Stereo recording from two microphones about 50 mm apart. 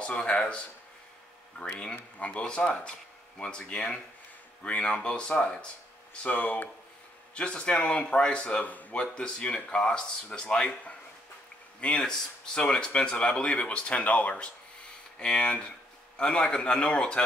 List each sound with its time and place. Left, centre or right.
0.0 s speech: left
2.1 s speech: left
6.2 s speech: left
7.3 s speech: left